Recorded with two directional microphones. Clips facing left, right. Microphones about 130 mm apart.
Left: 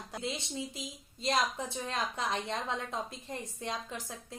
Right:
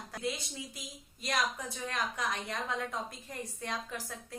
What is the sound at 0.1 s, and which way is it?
A woman's voice, 25° left (ahead or behind).